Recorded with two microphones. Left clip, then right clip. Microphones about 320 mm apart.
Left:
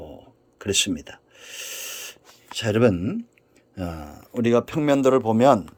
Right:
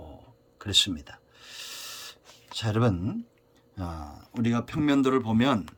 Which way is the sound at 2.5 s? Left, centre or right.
Right.